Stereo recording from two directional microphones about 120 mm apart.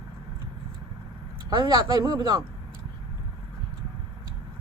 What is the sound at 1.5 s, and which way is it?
Speech, 40° right (ahead or behind).